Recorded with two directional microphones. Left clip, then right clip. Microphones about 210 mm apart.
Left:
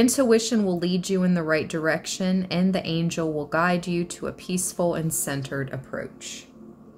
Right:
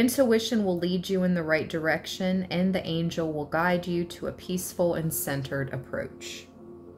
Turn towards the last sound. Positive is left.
turn(degrees=5)  # may be behind; listen again after turning